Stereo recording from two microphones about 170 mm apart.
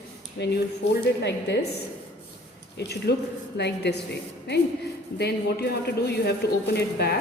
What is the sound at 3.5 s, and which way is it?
Speech, 85° left.